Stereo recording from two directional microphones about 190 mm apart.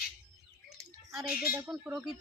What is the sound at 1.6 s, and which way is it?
Speech, 5° right (ahead or behind).